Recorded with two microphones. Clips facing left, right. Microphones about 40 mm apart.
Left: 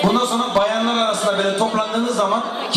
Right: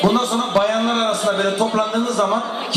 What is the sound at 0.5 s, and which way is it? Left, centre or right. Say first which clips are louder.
A man's voice: right 1 dB; centre.